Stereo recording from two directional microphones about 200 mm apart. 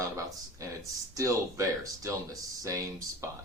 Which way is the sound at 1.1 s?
15° right (ahead or behind).